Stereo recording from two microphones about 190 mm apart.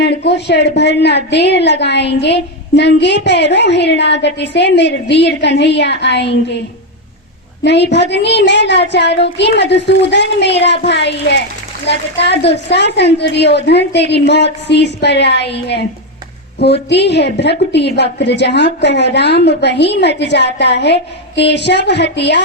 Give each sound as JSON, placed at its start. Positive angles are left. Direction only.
{"t": 0.0, "sound": "a woman's voice", "side_deg": 60}
{"t": 7.6, "sound": "a woman's voice", "side_deg": 65}